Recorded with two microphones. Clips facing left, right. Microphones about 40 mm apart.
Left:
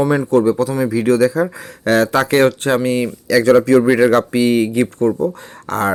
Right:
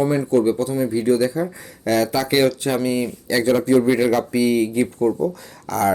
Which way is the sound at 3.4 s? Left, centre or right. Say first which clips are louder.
Left 5 dB; left.